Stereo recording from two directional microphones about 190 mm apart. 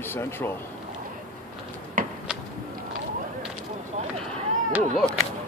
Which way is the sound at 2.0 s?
45° right (ahead or behind).